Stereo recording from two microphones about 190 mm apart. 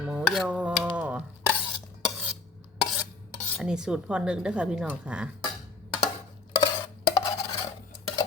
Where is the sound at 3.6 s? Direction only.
5° right (ahead or behind).